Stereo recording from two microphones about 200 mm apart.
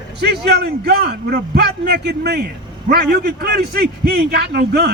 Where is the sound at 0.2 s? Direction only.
55° right (ahead or behind).